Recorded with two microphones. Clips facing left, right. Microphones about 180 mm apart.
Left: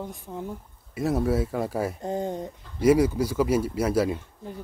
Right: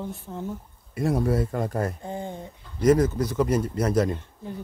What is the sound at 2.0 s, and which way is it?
Speech, 40° left (ahead or behind).